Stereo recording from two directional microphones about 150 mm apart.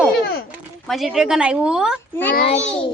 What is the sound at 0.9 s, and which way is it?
A woman's voice, centre (ahead or behind).